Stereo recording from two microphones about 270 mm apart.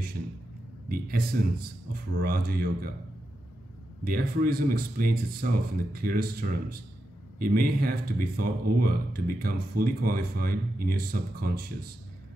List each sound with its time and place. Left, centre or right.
0.8 s speech: right
4.0 s speech: right